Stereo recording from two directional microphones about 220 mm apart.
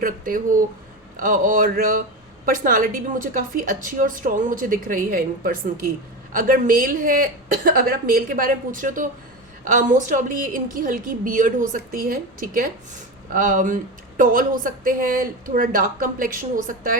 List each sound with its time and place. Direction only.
0.0 s a woman's voice: 40° right (ahead or behind)